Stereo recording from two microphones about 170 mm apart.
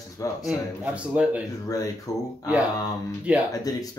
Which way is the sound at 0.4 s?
5° right (ahead or behind).